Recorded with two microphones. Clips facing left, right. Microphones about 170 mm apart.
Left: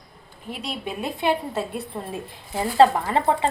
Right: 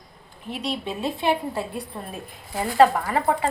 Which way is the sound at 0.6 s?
10° left (ahead or behind).